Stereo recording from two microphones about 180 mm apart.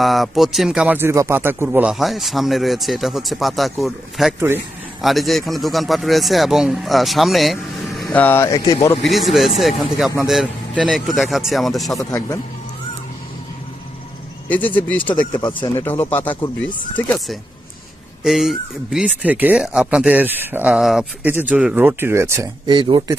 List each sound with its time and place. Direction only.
0.0 s speech: centre (ahead or behind)
4.4 s speech: 15° right (ahead or behind)
5.0 s speech: centre (ahead or behind)
8.0 s speech: 10° left (ahead or behind)
9.0 s speech: centre (ahead or behind)
11.9 s speech: 20° left (ahead or behind)
14.5 s speech: 10° left (ahead or behind)
15.3 s speech: 25° left (ahead or behind)
18.2 s speech: centre (ahead or behind)
22.7 s speech: 25° right (ahead or behind)